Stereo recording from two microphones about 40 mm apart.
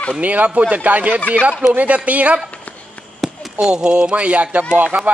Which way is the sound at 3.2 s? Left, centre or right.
Centre.